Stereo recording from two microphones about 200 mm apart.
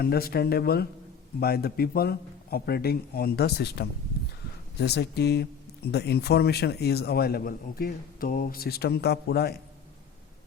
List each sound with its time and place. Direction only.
0.0 s speech: 50° left (ahead or behind)